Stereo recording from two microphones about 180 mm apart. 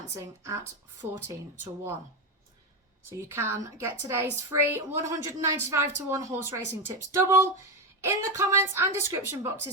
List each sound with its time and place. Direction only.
0.2 s a woman's voice: 15° right (ahead or behind)
3.2 s a woman's voice: 15° right (ahead or behind)